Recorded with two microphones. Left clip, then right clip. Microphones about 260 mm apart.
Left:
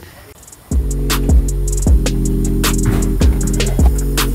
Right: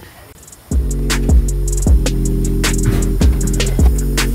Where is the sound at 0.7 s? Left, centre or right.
Centre.